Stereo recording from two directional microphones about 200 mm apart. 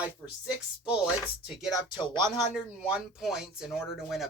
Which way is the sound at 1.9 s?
20° left (ahead or behind).